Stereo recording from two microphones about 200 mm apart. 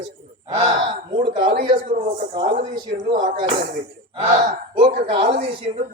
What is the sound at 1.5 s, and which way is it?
Speech, 45° right (ahead or behind).